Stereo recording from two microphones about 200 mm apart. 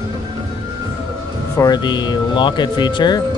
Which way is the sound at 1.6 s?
20° left (ahead or behind).